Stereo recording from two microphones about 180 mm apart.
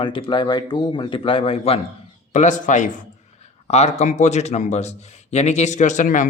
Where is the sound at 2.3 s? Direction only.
45° left (ahead or behind).